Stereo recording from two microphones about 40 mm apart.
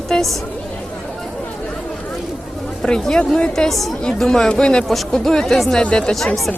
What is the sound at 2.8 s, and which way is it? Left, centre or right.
Speech, centre.